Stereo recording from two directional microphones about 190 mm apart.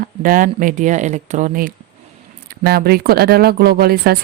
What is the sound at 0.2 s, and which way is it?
Speech, 45° right (ahead or behind).